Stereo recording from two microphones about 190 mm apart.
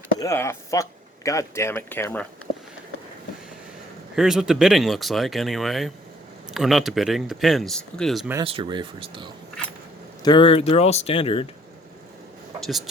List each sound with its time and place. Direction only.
0.2 s speech: 15° left (ahead or behind)
4.1 s speech: centre (ahead or behind)
8.4 s speech: 25° right (ahead or behind)
10.2 s speech: 25° left (ahead or behind)
12.5 s speech: centre (ahead or behind)